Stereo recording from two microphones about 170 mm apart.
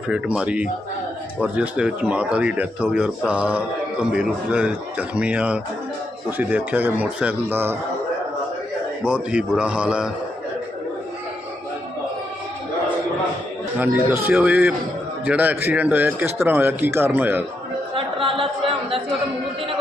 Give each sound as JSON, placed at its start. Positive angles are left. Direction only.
{"t": 0.1, "sound": "speech", "side_deg": -5}
{"t": 9.0, "sound": "speech", "side_deg": -5}
{"t": 13.7, "sound": "speech", "side_deg": -10}
{"t": 17.9, "sound": "chatter", "side_deg": -30}